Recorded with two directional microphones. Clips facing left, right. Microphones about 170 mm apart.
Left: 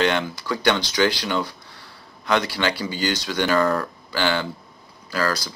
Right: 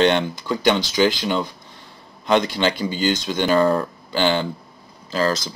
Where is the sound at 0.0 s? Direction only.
20° right (ahead or behind).